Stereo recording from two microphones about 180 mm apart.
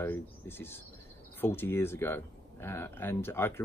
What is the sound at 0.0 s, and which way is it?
Speech, 10° left (ahead or behind).